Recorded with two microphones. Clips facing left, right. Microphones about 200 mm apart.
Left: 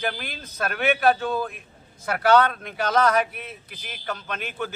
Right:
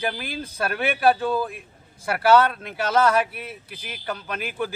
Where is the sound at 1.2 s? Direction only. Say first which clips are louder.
Right 2 dB; 10° right (ahead or behind).